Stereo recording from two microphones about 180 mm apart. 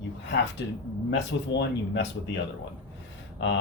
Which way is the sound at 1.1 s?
75° left (ahead or behind).